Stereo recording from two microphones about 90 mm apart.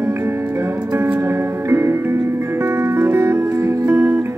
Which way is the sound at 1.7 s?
30° right (ahead or behind).